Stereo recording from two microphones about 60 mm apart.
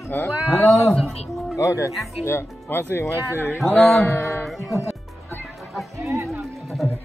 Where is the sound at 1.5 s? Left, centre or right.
Left.